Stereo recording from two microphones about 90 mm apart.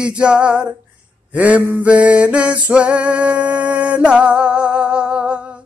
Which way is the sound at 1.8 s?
15° right (ahead or behind).